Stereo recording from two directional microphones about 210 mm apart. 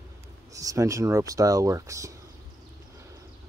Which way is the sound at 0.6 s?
15° right (ahead or behind).